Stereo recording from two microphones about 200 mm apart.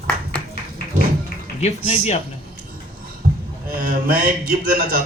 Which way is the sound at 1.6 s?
35° left (ahead or behind).